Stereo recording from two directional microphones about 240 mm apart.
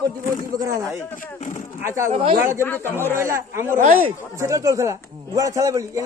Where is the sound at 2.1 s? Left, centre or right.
Right.